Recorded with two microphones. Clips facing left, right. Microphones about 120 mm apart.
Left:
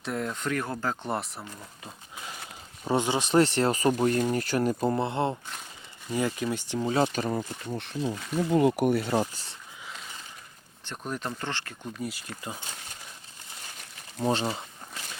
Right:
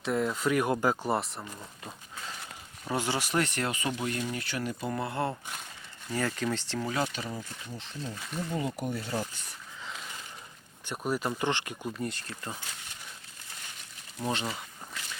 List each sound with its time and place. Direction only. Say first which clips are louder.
0.0 s speech: right 3 dB; centre (ahead or behind)
2.8 s speech: left 5 dB; 20° left (ahead or behind); by 4.9 s 40° left (ahead or behind)
4.9 s speech: left 4 dB; 25° left (ahead or behind)
6.8 s speech: left 7 dB; 30° left (ahead or behind)
7.1 s speech: left 8 dB; 50° left (ahead or behind); by 9.2 s 65° left (ahead or behind)
9.2 s speech: left 5 dB; 35° left (ahead or behind)
10.8 s speech: right 3 dB; 10° right (ahead or behind)
11.9 s speech: even; 5° left (ahead or behind)
14.2 s speech: left 5 dB; 30° left (ahead or behind)